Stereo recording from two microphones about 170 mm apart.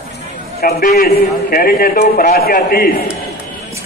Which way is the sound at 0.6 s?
65° left (ahead or behind).